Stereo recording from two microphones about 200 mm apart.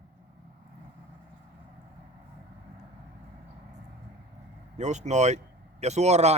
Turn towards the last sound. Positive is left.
turn(degrees=-35)  # may be behind; listen again after turning